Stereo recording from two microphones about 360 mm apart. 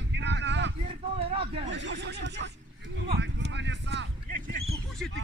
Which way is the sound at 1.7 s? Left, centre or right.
Right.